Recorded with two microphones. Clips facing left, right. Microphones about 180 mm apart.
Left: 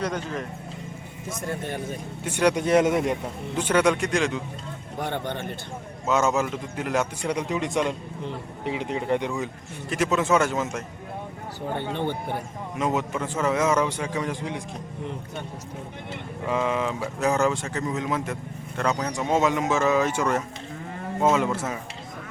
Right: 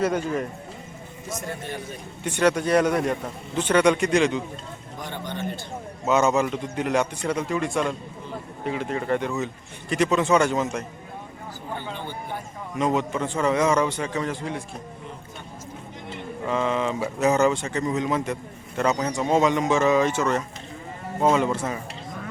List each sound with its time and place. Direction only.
0.0 s speech: 10° right (ahead or behind)
1.3 s a man's voice: 50° left (ahead or behind)
2.2 s speech: 10° left (ahead or behind)
3.6 s speech: 5° left (ahead or behind)
4.9 s speech: 60° left (ahead or behind)
6.1 s speech: centre (ahead or behind)
7.3 s a man's voice: 15° left (ahead or behind)
11.8 s speech: 60° left (ahead or behind)
12.7 s a man's voice: 5° left (ahead or behind)
16.5 s speech: 10° left (ahead or behind)